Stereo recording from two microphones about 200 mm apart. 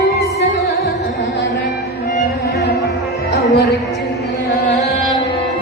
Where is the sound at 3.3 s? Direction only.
50° left (ahead or behind).